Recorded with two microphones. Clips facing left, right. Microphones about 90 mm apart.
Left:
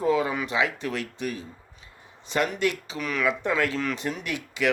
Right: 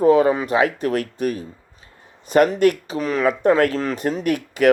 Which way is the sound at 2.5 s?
50° right (ahead or behind).